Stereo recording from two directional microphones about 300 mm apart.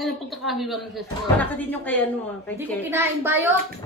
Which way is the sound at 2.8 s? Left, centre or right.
Centre.